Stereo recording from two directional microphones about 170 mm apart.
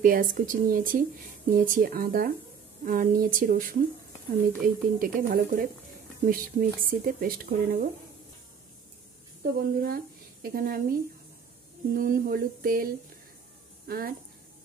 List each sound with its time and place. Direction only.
0.0 s speech: 55° right (ahead or behind)
4.9 s speech: 55° right (ahead or behind)
9.4 s speech: 60° right (ahead or behind)